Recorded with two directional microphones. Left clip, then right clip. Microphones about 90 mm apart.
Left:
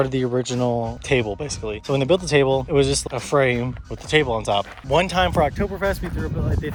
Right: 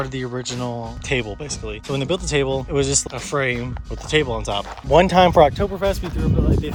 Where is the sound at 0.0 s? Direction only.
10° right (ahead or behind).